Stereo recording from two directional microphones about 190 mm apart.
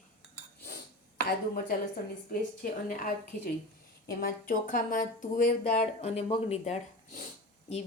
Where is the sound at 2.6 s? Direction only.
50° left (ahead or behind).